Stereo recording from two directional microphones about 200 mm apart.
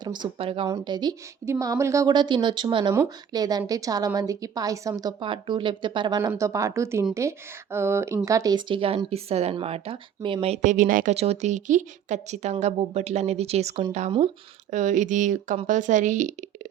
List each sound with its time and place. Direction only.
0.0 s a woman's voice: 20° right (ahead or behind); by 16.3 s 40° right (ahead or behind)